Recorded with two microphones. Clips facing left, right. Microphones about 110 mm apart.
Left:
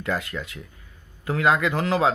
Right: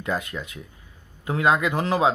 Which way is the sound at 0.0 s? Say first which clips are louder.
Even; 20° right (ahead or behind).